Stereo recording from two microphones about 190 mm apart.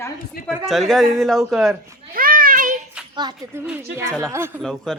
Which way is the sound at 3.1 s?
20° right (ahead or behind).